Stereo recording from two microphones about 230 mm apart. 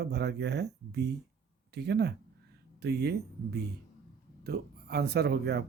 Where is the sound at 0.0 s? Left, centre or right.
Right.